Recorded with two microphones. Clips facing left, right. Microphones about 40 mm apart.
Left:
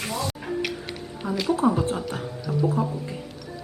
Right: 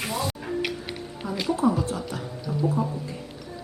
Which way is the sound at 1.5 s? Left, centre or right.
Left.